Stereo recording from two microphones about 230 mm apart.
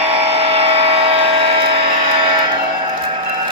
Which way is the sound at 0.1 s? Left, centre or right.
Right.